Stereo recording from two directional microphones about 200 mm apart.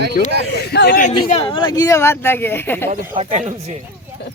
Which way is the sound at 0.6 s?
55° left (ahead or behind).